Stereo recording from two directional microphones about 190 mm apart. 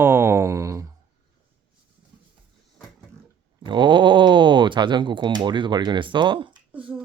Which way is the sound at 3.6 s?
25° right (ahead or behind).